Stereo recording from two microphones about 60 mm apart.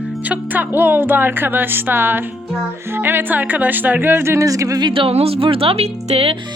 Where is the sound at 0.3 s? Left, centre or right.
Right.